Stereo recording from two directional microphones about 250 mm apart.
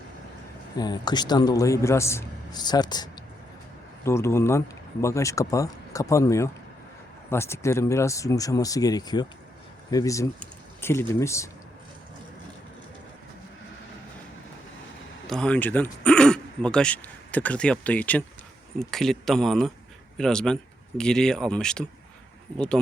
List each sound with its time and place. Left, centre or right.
0.8 s speech: centre
15.3 s speech: centre